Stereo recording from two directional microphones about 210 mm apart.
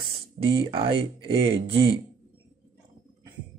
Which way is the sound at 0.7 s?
25° right (ahead or behind).